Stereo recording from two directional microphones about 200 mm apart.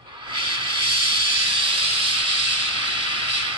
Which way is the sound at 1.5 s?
25° right (ahead or behind).